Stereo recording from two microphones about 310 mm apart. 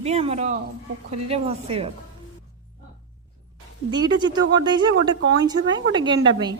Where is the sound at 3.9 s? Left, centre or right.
Centre.